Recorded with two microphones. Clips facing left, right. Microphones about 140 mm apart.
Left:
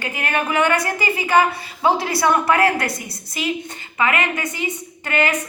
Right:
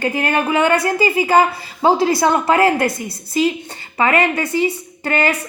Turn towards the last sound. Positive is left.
turn(degrees=-35)  # may be behind; listen again after turning